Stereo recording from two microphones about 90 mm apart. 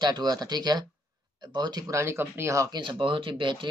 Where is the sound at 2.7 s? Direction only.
60° right (ahead or behind).